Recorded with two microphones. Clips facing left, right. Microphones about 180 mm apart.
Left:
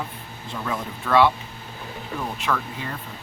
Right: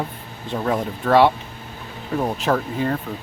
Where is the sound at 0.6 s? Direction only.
35° right (ahead or behind).